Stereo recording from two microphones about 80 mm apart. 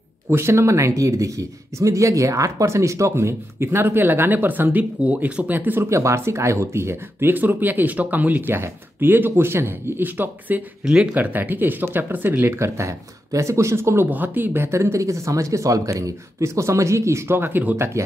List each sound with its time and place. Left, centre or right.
0.3 s speech: right
5.8 s speech: right
10.8 s speech: centre
11.1 s speech: right
14.0 s speech: right
14.7 s speech: right